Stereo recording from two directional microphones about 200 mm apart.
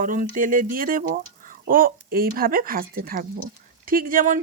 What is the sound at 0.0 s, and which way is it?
Speech, 40° right (ahead or behind).